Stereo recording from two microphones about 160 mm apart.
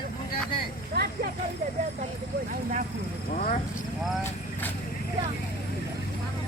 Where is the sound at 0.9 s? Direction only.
80° right.